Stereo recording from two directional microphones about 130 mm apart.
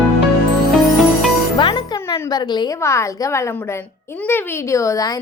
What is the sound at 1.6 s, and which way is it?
Music, 40° left (ahead or behind).